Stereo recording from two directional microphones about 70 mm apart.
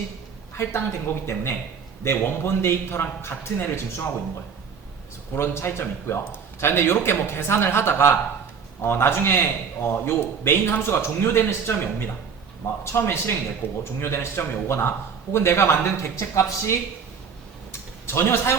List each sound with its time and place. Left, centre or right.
0.5 s a man's voice: left
5.3 s a man's voice: left
17.7 s a sound: left